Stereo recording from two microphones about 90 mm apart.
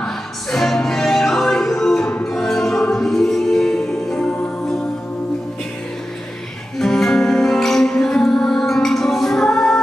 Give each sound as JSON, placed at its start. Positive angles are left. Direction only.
{"t": 0.0, "sound": "music", "side_deg": 5}
{"t": 2.0, "sound": "music", "side_deg": 15}
{"t": 2.3, "sound": "music", "side_deg": 5}
{"t": 6.8, "sound": "music", "side_deg": 5}